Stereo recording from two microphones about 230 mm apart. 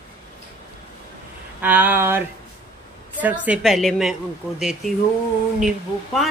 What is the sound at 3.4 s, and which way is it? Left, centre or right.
A woman's voice, centre.